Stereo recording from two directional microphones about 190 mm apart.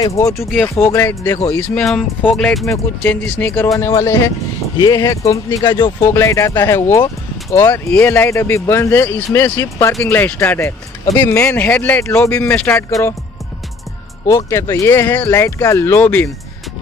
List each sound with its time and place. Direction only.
0.0 s speech: 15° left (ahead or behind)
1.8 s speech: 5° left (ahead or behind)
14.2 s speech: 15° left (ahead or behind)